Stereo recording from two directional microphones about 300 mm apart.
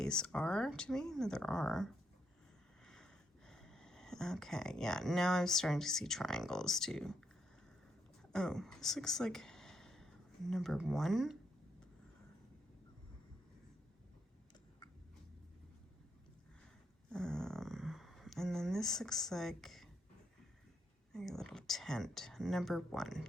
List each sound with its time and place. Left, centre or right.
0.0 s speech: centre
8.3 s speech: centre
17.1 s speech: centre
21.1 s speech: centre